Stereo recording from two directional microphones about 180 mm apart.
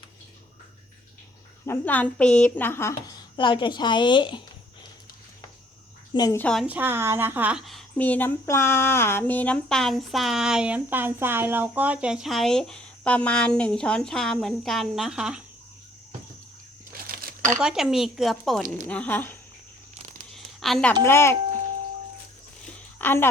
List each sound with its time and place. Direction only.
1.6 s a woman's voice: 10° left (ahead or behind)
3.3 s a woman's voice: 25° left (ahead or behind)
6.1 s a woman's voice: 20° left (ahead or behind)
6.4 s a woman's voice: 5° left (ahead or behind)
6.7 s a woman's voice: 10° right (ahead or behind)
17.1 s crumpling: 50° right (ahead or behind)
17.6 s a woman's voice: 5° right (ahead or behind)
20.3 s a sound: centre (ahead or behind)
21.0 s a woman's voice: 15° left (ahead or behind)
23.0 s a woman's voice: 10° left (ahead or behind)